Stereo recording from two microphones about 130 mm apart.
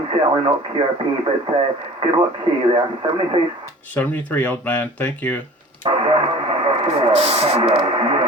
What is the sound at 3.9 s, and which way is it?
Speech, 10° left (ahead or behind).